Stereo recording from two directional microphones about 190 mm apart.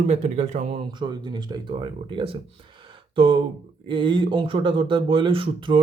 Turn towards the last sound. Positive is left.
turn(degrees=-25)  # may be behind; listen again after turning